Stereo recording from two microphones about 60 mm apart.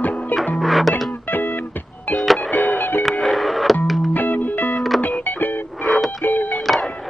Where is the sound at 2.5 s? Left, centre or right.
Left.